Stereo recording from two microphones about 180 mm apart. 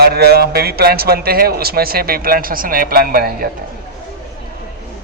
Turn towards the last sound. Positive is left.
turn(degrees=-55)  # may be behind; listen again after turning